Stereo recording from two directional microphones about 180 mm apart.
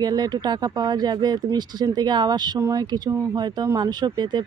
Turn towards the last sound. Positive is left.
turn(degrees=-25)  # may be behind; listen again after turning